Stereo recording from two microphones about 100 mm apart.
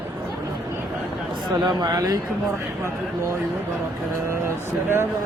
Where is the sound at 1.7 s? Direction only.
40° right (ahead or behind).